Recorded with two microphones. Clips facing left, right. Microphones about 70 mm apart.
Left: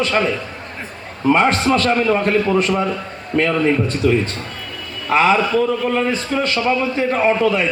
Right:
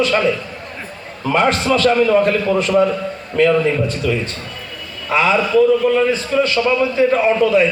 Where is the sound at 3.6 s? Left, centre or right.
Left.